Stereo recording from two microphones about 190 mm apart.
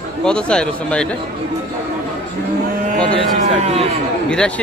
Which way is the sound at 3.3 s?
35° right (ahead or behind).